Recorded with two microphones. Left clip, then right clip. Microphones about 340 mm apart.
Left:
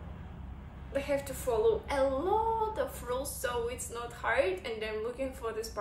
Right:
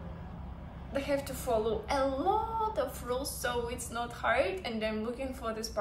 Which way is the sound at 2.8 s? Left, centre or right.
Centre.